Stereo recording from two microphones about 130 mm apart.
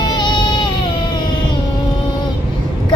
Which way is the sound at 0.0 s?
35° left (ahead or behind).